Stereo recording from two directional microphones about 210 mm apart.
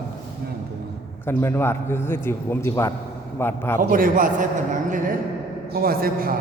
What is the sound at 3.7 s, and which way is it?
A man's voice, 40° right (ahead or behind).